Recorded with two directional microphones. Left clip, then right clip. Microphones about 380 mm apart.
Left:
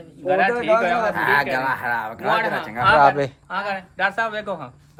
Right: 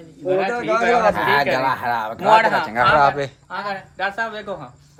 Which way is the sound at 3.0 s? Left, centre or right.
Centre.